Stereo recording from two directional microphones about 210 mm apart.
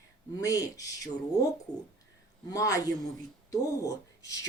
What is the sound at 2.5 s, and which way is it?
Speech, 15° left (ahead or behind).